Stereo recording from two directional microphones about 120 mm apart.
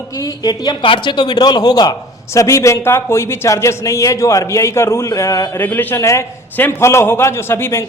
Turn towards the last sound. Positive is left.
turn(degrees=20)  # may be behind; listen again after turning